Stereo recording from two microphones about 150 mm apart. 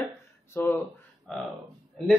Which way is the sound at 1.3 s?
Centre (ahead or behind).